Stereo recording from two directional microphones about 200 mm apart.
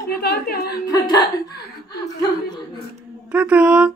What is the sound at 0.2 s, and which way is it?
Speech, 50° left (ahead or behind).